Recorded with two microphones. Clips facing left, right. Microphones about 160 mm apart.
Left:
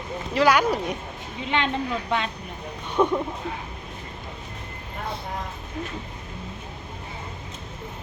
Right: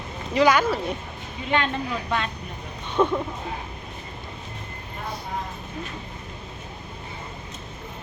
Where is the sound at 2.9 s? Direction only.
10° left (ahead or behind).